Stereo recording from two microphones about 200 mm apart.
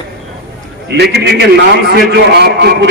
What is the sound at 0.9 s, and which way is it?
A man's voice, 55° right (ahead or behind).